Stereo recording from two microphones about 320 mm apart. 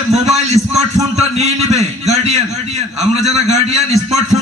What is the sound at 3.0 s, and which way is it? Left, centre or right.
A man's voice, centre.